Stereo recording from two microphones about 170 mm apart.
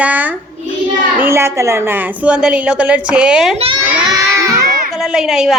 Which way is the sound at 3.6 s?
25° right (ahead or behind).